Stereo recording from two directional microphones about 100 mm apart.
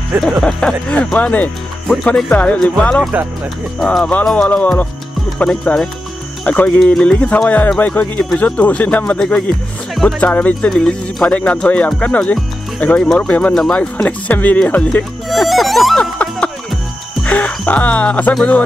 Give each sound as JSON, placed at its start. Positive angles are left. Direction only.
{"t": 0.2, "sound": "speech", "side_deg": 5}
{"t": 3.8, "sound": "music", "side_deg": 5}
{"t": 4.1, "sound": "speech", "side_deg": 10}
{"t": 10.7, "sound": "speech", "side_deg": 5}
{"t": 15.2, "sound": "speech", "side_deg": 0}
{"t": 17.2, "sound": "music", "side_deg": 10}
{"t": 18.3, "sound": "speech", "side_deg": 10}